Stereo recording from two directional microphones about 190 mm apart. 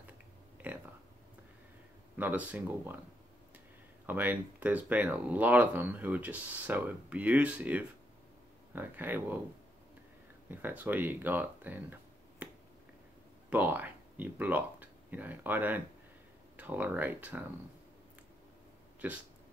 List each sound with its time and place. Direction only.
2.1 s speech: 10° right (ahead or behind)
4.0 s speech: 10° right (ahead or behind)
10.5 s speech: 10° right (ahead or behind)
13.5 s speech: 10° right (ahead or behind)